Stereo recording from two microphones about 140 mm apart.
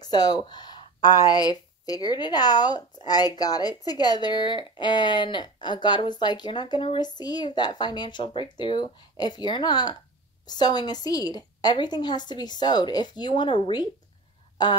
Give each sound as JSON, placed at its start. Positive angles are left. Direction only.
{"t": 0.0, "sound": "speech", "side_deg": 30}